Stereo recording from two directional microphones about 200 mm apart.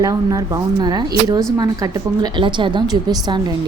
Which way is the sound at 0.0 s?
15° right (ahead or behind).